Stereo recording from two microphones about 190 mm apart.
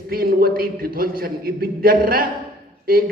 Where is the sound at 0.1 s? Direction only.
50° right (ahead or behind).